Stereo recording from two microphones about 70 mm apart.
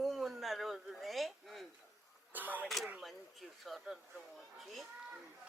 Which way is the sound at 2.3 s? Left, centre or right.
Right.